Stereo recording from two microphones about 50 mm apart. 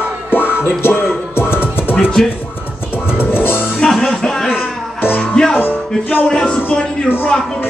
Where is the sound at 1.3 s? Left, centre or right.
Left.